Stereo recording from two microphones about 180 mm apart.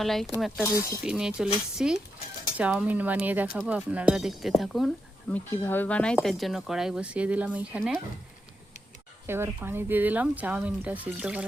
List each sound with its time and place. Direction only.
0.0 s speech: centre (ahead or behind)
0.6 s speech: 15° left (ahead or behind)
1.0 s speech: 5° right (ahead or behind)
5.3 s speech: 10° left (ahead or behind); by 7.9 s 10° right (ahead or behind)
9.2 s speech: 15° right (ahead or behind)